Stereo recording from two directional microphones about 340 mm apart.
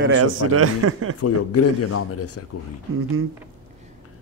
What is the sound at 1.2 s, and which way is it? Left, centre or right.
Speech, left.